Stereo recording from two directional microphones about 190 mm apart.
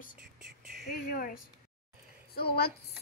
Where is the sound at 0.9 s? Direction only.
50° left (ahead or behind).